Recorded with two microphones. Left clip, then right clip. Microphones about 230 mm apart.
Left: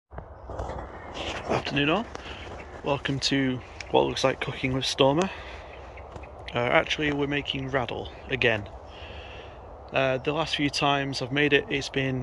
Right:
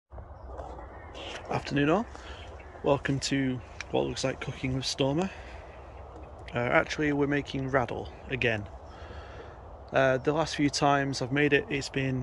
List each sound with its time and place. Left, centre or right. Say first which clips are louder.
1.6 s speech: right 1 dB; centre
6.5 s speech: left 3 dB; centre
9.9 s speech: even; right